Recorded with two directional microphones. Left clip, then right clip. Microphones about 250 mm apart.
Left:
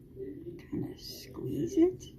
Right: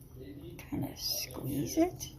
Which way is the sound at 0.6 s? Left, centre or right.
Right.